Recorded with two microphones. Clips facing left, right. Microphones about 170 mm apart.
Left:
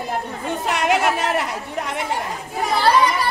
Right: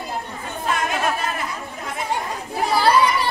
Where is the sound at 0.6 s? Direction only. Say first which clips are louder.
Left 3 dB; 75° left (ahead or behind).